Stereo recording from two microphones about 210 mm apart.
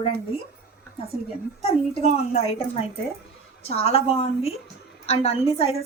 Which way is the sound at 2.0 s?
30° left (ahead or behind).